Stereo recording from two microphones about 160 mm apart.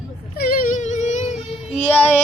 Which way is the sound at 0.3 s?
65° left (ahead or behind).